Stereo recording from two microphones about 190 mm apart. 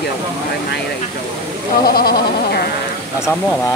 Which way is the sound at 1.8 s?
55° left (ahead or behind).